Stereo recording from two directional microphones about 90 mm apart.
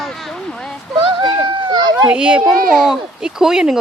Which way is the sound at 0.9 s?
65° right (ahead or behind).